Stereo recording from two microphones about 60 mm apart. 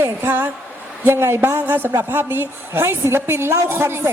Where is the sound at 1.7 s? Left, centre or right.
Right.